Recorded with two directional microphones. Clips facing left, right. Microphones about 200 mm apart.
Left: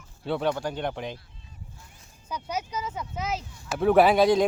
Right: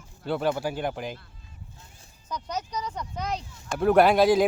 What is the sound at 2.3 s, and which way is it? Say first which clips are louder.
Speech: left 1 dB; 10° left (ahead or behind).